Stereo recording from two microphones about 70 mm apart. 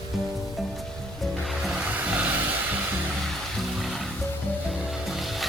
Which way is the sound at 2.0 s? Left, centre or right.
Right.